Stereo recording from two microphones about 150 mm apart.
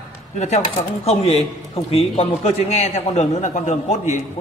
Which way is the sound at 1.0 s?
40° left (ahead or behind).